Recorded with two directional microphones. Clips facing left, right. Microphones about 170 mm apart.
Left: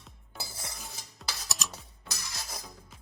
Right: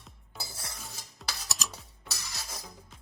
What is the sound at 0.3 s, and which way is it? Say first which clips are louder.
Cutlery: left 1 dB; centre (ahead or behind).